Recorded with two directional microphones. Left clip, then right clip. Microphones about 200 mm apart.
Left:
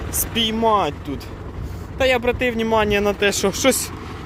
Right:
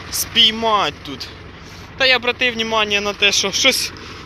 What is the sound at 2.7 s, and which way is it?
Speech, 25° left (ahead or behind).